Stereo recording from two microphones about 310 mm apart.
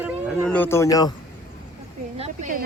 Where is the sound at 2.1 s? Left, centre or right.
Right.